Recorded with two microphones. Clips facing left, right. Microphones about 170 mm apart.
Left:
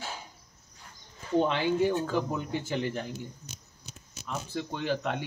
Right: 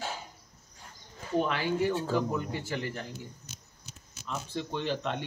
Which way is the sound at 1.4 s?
20° left (ahead or behind).